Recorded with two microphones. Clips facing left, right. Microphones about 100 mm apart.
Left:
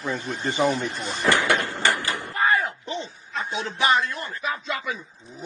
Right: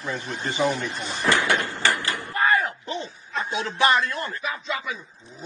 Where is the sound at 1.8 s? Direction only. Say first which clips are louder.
Left 1 dB; 20° left (ahead or behind).